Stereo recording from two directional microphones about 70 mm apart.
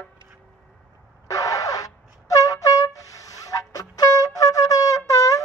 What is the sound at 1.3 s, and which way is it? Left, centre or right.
Wind instrument, left.